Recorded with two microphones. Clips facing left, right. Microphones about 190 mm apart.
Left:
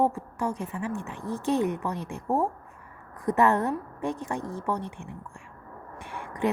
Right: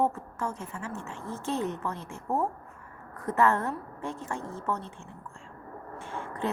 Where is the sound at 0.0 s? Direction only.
15° left (ahead or behind).